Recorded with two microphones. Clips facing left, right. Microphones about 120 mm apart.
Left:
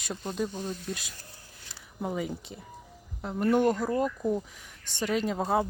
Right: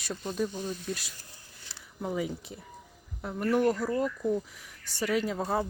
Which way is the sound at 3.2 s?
20° left (ahead or behind).